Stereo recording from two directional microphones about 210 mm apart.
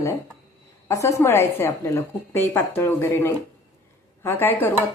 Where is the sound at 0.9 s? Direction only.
15° left (ahead or behind).